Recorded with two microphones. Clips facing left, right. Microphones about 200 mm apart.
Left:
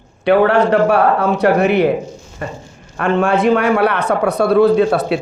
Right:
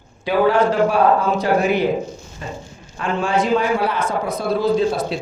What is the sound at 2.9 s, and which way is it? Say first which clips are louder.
A man's voice: left 5 dB; 65° left (ahead or behind).